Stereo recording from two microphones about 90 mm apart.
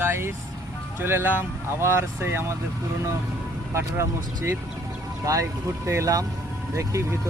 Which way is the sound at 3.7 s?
30° right (ahead or behind).